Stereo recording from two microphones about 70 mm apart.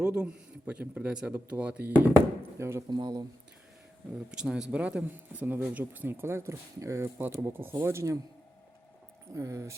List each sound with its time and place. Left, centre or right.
0.0 s speech: centre
2.4 s speech: right
2.9 s speech: right
4.3 s speech: centre; by 7.0 s right
7.0 s speech: right
9.3 s speech: right